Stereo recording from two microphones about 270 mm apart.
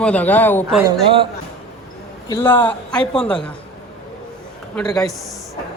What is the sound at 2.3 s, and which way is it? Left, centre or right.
A man's voice, centre.